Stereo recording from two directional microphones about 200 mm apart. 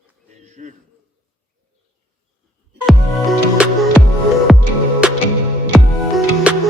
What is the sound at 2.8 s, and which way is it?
Music, centre (ahead or behind).